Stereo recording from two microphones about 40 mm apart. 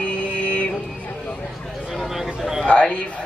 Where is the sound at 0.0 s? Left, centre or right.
Left.